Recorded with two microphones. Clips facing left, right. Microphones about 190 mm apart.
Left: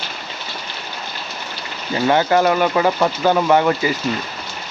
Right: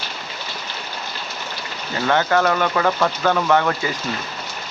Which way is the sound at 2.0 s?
15° left (ahead or behind).